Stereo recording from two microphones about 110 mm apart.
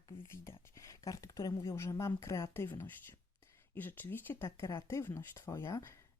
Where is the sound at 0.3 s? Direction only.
25° left (ahead or behind).